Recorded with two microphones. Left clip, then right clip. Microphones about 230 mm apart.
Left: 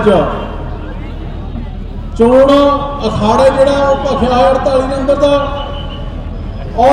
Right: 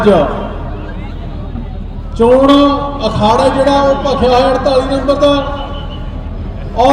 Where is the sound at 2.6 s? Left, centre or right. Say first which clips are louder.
Left 1 dB; right.